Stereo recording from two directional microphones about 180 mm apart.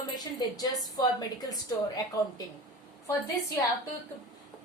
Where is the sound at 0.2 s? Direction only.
20° left (ahead or behind).